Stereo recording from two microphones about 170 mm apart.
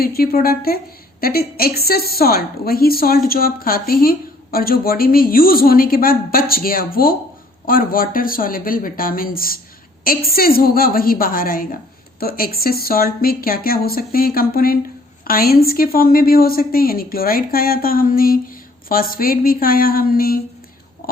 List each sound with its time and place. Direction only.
0.0 s a woman's voice: 60° left (ahead or behind)